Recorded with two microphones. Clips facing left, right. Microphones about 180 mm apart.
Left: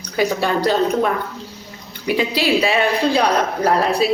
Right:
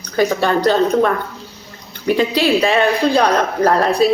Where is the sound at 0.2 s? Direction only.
10° left (ahead or behind).